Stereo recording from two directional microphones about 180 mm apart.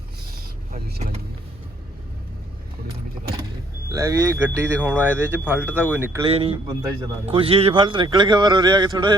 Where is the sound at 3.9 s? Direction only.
20° right (ahead or behind).